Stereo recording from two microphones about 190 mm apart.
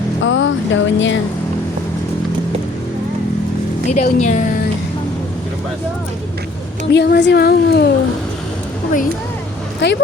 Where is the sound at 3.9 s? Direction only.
40° left (ahead or behind).